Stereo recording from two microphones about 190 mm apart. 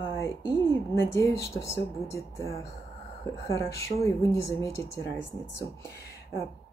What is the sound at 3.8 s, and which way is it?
Speech, 15° left (ahead or behind).